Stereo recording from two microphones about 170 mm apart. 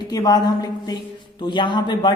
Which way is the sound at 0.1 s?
20° left (ahead or behind).